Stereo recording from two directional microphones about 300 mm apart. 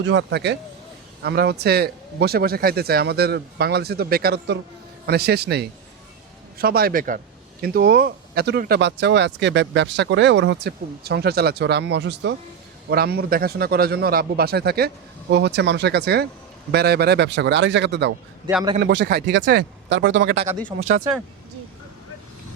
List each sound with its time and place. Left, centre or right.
0.0 s a man's voice: right
18.4 s a man's voice: centre
18.8 s speech: right
20.7 s a man's voice: centre